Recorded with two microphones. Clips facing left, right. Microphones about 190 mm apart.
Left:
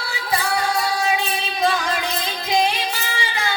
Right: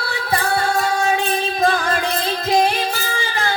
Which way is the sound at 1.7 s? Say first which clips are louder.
Right 3 dB; 55° right (ahead or behind).